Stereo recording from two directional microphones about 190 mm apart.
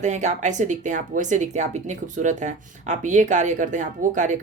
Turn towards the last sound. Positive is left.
turn(degrees=-40)  # may be behind; listen again after turning